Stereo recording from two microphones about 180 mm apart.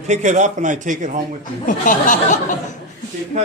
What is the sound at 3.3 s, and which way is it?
Speech, 40° right (ahead or behind).